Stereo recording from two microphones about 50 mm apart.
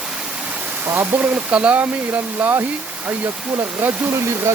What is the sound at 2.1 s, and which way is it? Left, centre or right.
Speech, right.